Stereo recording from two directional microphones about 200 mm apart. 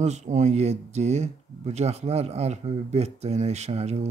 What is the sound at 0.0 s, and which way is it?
Speech, 35° right (ahead or behind).